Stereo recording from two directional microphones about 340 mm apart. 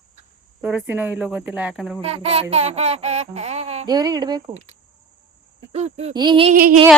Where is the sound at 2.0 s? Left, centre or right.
Centre.